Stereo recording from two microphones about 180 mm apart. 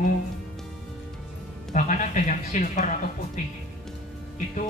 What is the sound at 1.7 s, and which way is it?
Speech, 45° left (ahead or behind).